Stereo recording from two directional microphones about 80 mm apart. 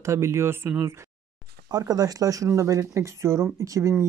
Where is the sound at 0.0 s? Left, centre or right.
Right.